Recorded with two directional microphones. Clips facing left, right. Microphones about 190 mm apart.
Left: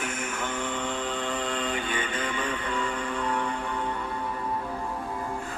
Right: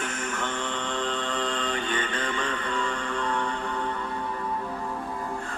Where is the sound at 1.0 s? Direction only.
10° left (ahead or behind).